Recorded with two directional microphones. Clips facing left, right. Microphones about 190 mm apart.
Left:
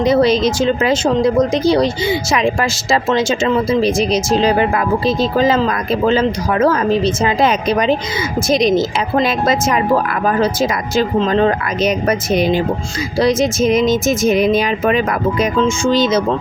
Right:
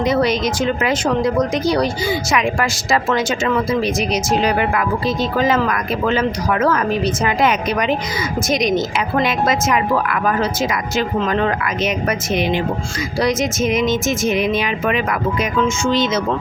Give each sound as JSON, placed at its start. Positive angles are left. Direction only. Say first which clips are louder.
{"t": 0.0, "sound": "speech", "louder": "left 4 dB", "side_deg": 30}